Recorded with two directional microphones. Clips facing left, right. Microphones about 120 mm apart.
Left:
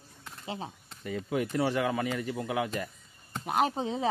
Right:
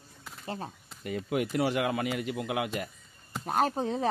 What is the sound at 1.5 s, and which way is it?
Speech, 35° left (ahead or behind).